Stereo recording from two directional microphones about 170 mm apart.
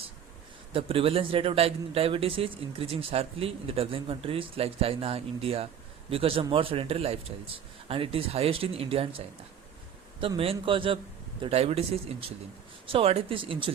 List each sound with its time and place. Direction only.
0.7 s a man's voice: 35° right (ahead or behind)